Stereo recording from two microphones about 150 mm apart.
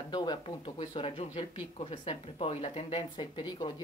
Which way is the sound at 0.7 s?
45° left (ahead or behind).